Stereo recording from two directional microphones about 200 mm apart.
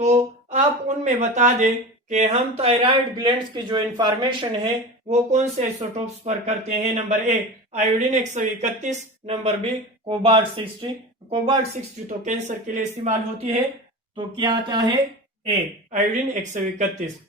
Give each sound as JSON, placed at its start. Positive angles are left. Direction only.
{"t": 0.0, "sound": "speech", "side_deg": -35}
{"t": 12.0, "sound": "speech", "side_deg": -35}
{"t": 14.2, "sound": "speech", "side_deg": -20}
{"t": 15.4, "sound": "speech", "side_deg": -35}